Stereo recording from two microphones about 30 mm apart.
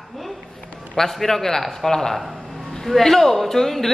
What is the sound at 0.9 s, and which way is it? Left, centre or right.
Speech, centre.